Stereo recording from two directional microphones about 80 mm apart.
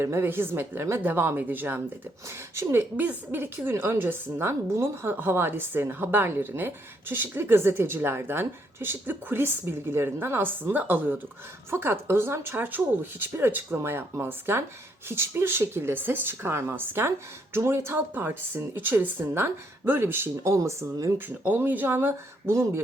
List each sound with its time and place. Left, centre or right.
0.0 s a woman's voice: right
2.6 s speech: right
3.0 s a woman's voice: right
21.2 s a woman's voice: right